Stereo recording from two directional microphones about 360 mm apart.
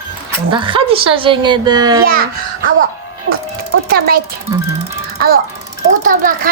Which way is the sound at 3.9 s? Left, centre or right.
Right.